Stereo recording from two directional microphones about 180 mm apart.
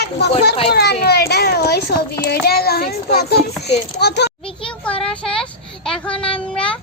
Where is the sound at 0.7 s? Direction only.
65° left (ahead or behind).